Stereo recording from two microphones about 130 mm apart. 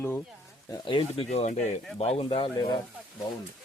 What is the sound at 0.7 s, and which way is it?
Speech, 40° left (ahead or behind).